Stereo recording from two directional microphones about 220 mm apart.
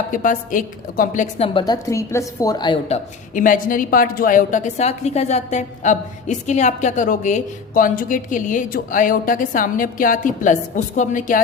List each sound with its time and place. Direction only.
0.1 s a woman's voice: 35° left (ahead or behind)
1.5 s a woman's voice: 20° left (ahead or behind)
3.3 s a woman's voice: 40° left (ahead or behind)